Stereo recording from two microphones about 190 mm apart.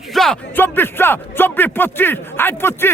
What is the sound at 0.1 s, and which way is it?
Speech, centre (ahead or behind).